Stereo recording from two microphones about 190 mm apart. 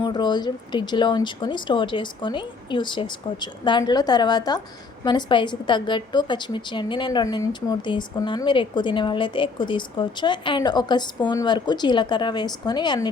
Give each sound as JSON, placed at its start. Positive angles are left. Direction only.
{"t": 0.0, "sound": "a woman's voice", "side_deg": 25}